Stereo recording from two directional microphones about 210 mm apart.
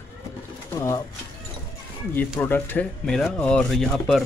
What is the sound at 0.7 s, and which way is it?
Speech, 15° left (ahead or behind).